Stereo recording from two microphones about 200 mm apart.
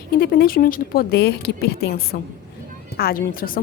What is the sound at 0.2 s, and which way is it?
A woman's voice, 45° left (ahead or behind).